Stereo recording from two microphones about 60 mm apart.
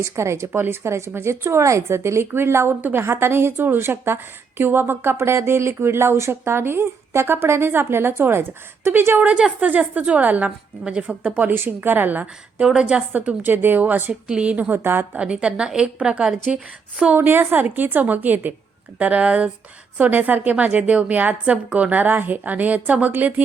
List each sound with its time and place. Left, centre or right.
0.0 s a woman's voice: right
2.2 s a woman's voice: right
11.5 s a woman's voice: right
12.6 s a woman's voice: centre
13.1 s a woman's voice: right
14.3 s a woman's voice: centre
17.2 s a woman's voice: right